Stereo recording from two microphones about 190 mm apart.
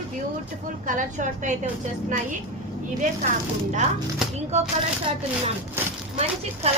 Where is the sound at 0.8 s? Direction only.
40° right (ahead or behind).